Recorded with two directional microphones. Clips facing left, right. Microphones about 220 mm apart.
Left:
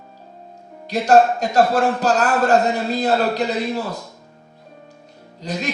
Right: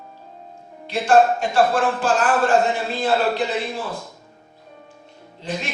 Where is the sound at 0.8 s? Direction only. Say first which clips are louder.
Left 2 dB; 40° left (ahead or behind).